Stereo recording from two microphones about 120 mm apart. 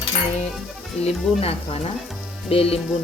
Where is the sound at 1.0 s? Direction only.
55° left (ahead or behind).